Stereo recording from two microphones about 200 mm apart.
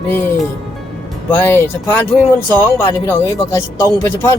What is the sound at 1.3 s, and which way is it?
Speech, 10° left (ahead or behind).